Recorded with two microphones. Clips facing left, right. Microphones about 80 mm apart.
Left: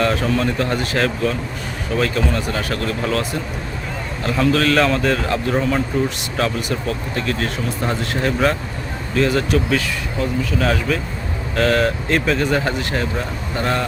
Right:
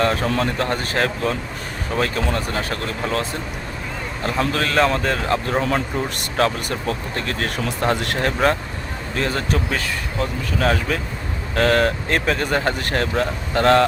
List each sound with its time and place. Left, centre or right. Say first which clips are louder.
0.0 s speech: left 1 dB; right
9.1 s speech: left 5 dB; right